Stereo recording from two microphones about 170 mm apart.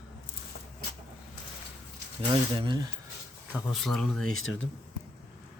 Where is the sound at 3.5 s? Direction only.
Centre (ahead or behind).